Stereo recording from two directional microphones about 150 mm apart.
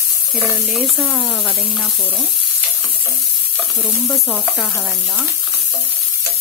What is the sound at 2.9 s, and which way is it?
Frying, 10° left (ahead or behind).